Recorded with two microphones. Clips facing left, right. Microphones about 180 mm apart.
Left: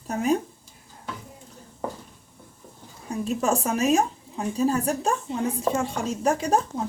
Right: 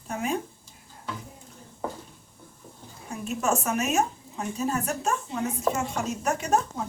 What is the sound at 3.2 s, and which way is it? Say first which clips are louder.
A woman's voice: left 3 dB; 35° left (ahead or behind).